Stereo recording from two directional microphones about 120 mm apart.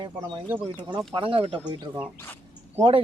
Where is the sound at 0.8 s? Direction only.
40° right (ahead or behind).